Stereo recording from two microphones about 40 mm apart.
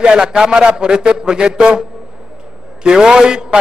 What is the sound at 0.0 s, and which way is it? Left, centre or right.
A man's voice, right.